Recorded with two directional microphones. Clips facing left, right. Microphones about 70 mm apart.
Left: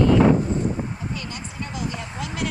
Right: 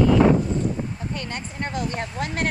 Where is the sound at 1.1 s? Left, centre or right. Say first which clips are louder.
Right 2 dB; right.